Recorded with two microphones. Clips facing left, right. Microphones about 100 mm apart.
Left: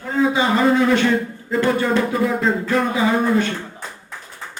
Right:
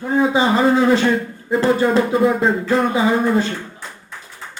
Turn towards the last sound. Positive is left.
turn(degrees=-30)  # may be behind; listen again after turning